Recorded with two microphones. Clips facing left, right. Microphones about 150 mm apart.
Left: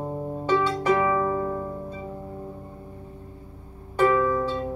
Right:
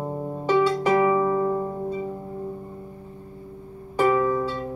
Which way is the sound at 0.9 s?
10° right (ahead or behind).